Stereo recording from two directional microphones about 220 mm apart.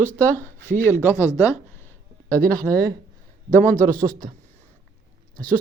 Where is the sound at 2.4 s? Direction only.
40° right (ahead or behind).